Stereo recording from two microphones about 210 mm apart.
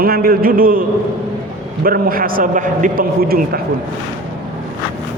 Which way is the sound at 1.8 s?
45° right (ahead or behind).